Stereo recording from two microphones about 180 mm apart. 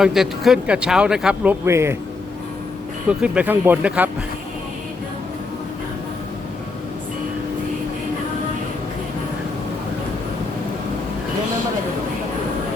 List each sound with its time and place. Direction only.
0.0 s speech: centre (ahead or behind)
3.1 s speech: 5° right (ahead or behind)